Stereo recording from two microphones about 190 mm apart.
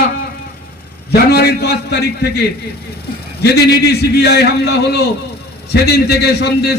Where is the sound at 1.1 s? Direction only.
55° left (ahead or behind).